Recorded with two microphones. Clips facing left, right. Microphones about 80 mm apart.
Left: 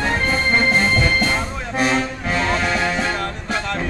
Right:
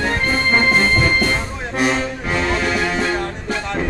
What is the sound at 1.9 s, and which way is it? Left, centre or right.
Music, centre.